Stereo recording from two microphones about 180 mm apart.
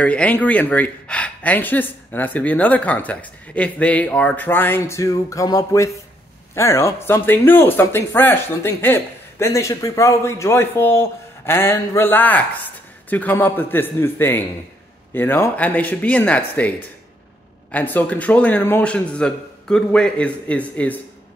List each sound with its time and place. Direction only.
0.0 s speech: 5° left (ahead or behind)